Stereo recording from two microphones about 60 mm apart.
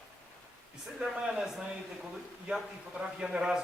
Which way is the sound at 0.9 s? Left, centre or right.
Centre.